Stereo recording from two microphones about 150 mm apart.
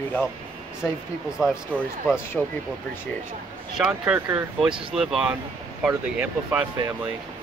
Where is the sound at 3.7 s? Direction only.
5° right (ahead or behind).